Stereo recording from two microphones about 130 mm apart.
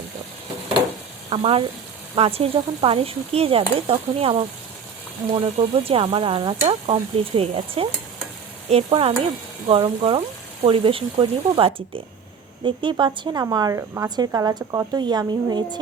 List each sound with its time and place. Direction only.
1.4 s speech: 50° right (ahead or behind); by 15.8 s 35° right (ahead or behind)